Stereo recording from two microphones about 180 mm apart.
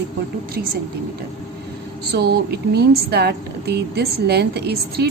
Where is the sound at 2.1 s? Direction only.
65° right (ahead or behind).